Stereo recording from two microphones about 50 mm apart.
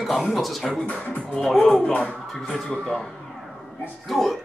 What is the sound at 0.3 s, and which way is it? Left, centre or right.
Speech, centre.